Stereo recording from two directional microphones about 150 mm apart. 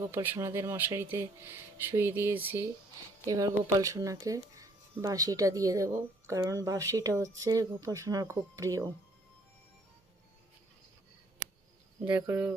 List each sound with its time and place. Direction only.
0.0 s speech: 15° right (ahead or behind)
12.0 s speech: 15° right (ahead or behind)